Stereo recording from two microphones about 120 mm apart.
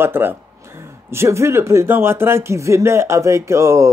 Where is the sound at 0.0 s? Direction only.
15° right (ahead or behind).